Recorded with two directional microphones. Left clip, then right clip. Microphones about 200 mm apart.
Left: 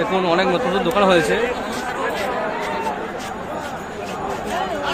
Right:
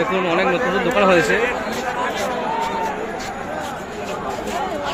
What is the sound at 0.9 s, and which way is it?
Speech, centre (ahead or behind).